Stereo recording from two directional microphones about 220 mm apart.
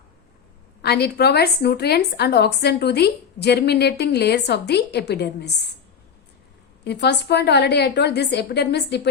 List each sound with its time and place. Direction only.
0.8 s a woman's voice: 50° left (ahead or behind)
6.8 s a woman's voice: 50° left (ahead or behind)